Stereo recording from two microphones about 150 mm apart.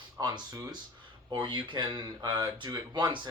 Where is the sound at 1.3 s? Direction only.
30° right (ahead or behind).